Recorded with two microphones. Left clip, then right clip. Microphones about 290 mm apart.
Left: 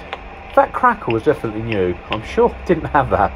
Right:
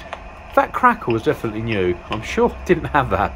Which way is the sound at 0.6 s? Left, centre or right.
Right.